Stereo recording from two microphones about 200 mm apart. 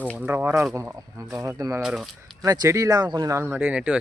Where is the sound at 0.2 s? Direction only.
10° right (ahead or behind).